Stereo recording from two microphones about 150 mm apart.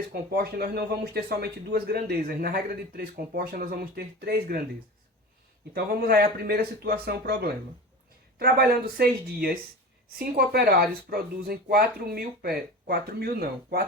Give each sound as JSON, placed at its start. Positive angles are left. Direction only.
{"t": 0.1, "sound": "speech", "side_deg": -90}
{"t": 5.7, "sound": "speech", "side_deg": -90}